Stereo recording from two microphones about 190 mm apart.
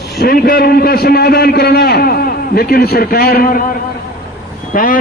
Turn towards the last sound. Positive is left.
turn(degrees=45)  # may be behind; listen again after turning